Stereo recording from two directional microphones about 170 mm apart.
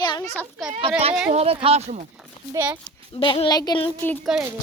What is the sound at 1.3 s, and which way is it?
Speech, 35° right (ahead or behind).